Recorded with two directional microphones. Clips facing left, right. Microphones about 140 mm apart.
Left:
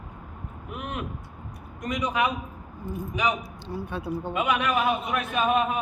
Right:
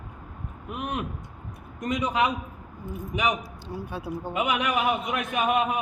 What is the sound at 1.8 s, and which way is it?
Speech, 25° right (ahead or behind).